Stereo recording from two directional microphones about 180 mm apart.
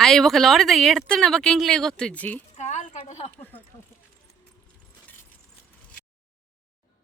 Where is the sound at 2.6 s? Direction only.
40° left (ahead or behind).